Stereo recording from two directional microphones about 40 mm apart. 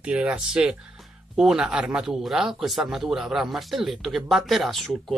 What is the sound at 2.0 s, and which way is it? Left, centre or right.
Speech, centre.